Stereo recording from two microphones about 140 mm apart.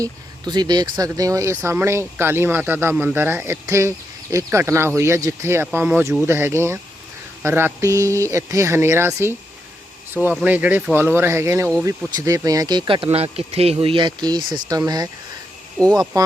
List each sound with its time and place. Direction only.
0.0 s speech: 30° right (ahead or behind)
10.4 s speech: 10° right (ahead or behind); by 15.1 s 25° right (ahead or behind)
16.1 s speech: 25° right (ahead or behind)